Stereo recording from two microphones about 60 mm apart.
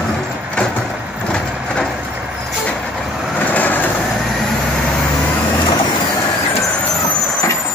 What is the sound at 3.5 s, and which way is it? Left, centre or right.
Vehicle, left.